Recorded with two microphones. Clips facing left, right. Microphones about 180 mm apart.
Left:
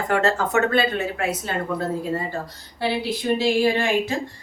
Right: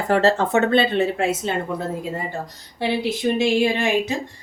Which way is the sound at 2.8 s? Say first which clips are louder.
Right 3 dB; 20° right (ahead or behind).